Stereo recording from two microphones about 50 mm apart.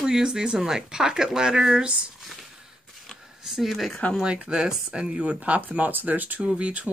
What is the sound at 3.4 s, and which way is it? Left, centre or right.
Speech, centre.